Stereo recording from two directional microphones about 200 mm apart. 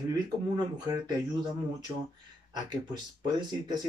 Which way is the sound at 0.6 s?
20° right (ahead or behind).